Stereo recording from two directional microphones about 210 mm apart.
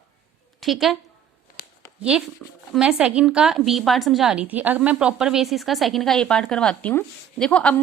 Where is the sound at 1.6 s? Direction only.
45° left (ahead or behind).